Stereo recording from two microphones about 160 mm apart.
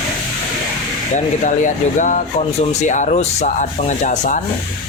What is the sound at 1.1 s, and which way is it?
Speech, 50° left (ahead or behind).